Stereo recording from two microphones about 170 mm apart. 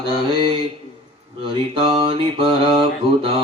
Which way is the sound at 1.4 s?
30° right (ahead or behind).